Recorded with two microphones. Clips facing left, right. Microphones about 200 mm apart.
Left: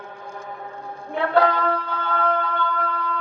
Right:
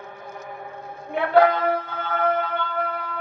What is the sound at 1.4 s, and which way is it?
Music, 20° right (ahead or behind).